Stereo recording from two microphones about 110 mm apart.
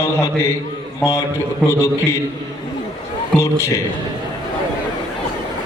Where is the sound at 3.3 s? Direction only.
25° left (ahead or behind).